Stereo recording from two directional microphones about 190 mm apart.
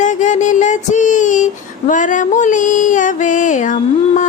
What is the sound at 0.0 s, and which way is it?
Music, 40° left (ahead or behind).